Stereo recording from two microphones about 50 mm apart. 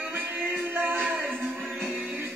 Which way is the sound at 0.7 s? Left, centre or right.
Right.